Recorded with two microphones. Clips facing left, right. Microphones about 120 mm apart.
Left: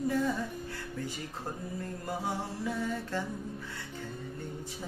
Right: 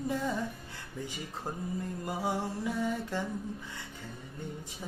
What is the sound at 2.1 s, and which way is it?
Music, 15° right (ahead or behind).